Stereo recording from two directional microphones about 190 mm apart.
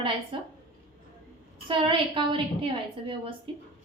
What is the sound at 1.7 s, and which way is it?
A woman's voice, 25° right (ahead or behind).